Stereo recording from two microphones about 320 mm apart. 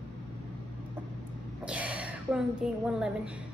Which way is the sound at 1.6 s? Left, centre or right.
Centre.